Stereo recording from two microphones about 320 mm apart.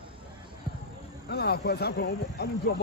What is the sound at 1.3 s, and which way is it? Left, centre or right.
Speech, left.